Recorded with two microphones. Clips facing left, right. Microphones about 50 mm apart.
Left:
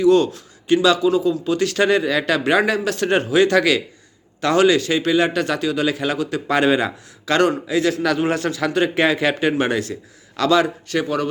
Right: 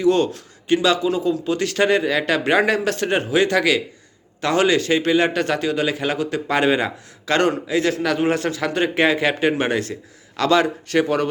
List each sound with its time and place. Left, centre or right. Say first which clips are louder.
0.0 s a man's voice: left 3 dB; right
3.1 s a man's voice: left 4 dB; centre
4.4 s a man's voice: left 2 dB; right